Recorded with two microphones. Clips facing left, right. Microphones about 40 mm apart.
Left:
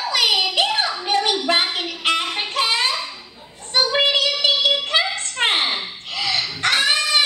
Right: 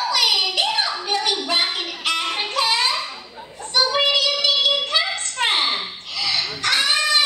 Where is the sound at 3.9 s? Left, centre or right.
Left.